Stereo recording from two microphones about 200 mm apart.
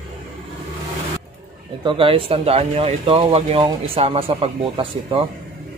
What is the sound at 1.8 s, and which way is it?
Speech, 25° right (ahead or behind).